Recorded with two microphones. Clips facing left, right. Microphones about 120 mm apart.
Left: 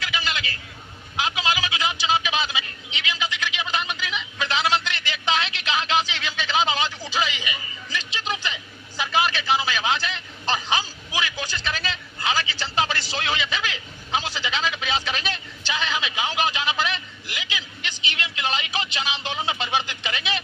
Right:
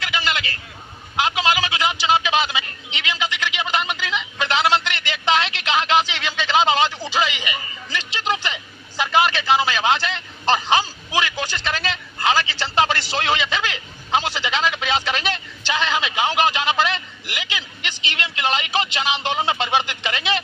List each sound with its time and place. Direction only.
0.0 s vehicle: 70° right (ahead or behind)
1.1 s a sound: 70° right (ahead or behind)
9.0 s a man's voice: 70° right (ahead or behind)